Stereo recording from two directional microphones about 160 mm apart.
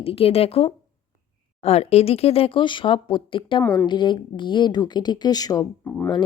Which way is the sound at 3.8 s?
30° left (ahead or behind).